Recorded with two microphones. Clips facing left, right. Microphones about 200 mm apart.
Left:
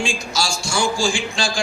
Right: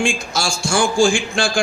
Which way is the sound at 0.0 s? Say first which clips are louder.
Right 3 dB; 50° right (ahead or behind).